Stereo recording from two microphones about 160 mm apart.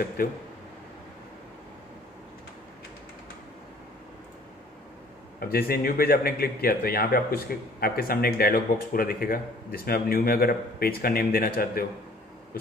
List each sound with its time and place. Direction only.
0.2 s speech: 65° left (ahead or behind)
5.4 s speech: 70° left (ahead or behind)